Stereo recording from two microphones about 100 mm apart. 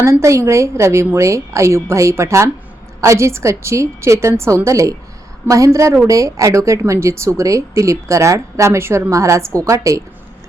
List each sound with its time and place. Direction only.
0.0 s a woman's voice: 30° right (ahead or behind)